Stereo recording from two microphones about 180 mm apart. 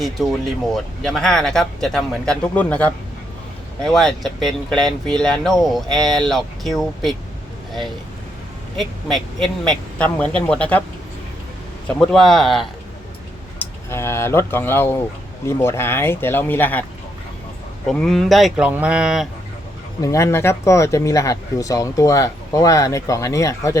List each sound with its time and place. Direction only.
0.2 s speech: centre (ahead or behind)
9.0 s speech: centre (ahead or behind)
11.9 s speech: centre (ahead or behind)
13.6 s speech: 15° left (ahead or behind)
17.8 s speech: 5° left (ahead or behind)
20.0 s speech: 15° left (ahead or behind)